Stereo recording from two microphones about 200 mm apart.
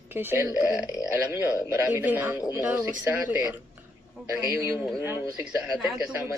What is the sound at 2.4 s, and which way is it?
Speech, 20° left (ahead or behind).